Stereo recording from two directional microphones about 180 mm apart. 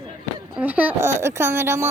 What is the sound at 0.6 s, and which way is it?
Speech, 10° right (ahead or behind).